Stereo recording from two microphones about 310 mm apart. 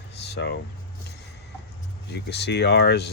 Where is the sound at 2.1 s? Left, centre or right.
Left.